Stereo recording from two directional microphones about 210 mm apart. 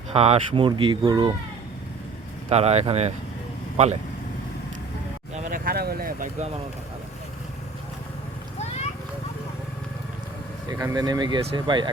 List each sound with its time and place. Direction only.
0.1 s speech: 30° right (ahead or behind)
2.5 s speech: 30° right (ahead or behind)
5.5 s a sound: 40° right (ahead or behind)
10.7 s speech: 15° right (ahead or behind)